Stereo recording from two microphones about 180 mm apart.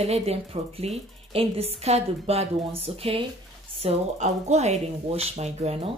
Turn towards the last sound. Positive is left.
turn(degrees=-35)  # may be behind; listen again after turning